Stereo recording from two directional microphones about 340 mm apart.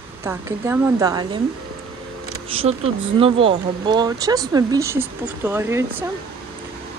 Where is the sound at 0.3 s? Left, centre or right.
Centre.